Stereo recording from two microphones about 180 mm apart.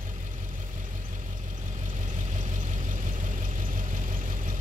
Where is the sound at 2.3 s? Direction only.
45° right (ahead or behind).